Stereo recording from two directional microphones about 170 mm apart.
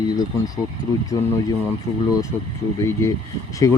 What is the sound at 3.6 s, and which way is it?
Speech, 20° left (ahead or behind).